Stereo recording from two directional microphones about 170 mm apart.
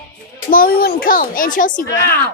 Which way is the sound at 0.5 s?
60° left (ahead or behind).